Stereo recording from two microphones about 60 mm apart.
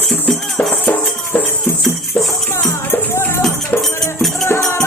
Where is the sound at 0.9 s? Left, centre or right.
Left.